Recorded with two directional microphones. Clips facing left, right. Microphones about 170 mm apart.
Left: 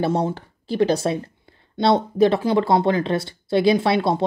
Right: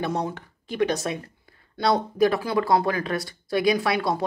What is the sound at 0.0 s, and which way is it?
Speech, 30° left (ahead or behind).